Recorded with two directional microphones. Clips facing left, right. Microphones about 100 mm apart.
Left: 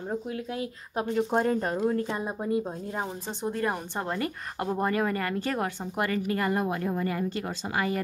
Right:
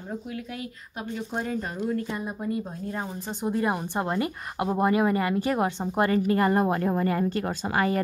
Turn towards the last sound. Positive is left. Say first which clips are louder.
# right 4 dB
turn(degrees=-45)  # may be behind; listen again after turning